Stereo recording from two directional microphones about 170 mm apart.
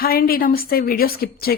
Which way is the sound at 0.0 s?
60° left (ahead or behind).